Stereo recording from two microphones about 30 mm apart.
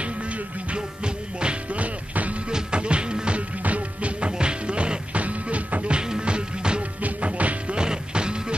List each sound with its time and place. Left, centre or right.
0.0 s music: right
0.7 s music: right
1.7 s music: right
2.7 s music: right
3.3 s music: right
4.3 s music: right
5.1 s music: right
5.9 s music: right
7.0 s music: right
7.7 s music: right